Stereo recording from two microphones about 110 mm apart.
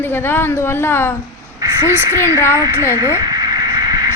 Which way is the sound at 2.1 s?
20° left (ahead or behind).